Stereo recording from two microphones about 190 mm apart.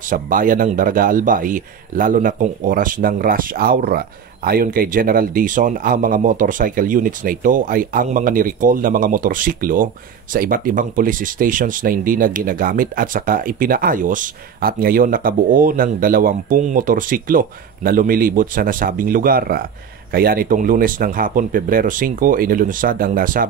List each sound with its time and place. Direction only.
0.1 s speech: 45° right (ahead or behind)